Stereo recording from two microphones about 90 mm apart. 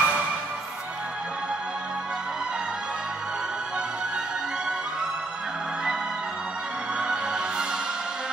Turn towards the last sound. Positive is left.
turn(degrees=-10)  # may be behind; listen again after turning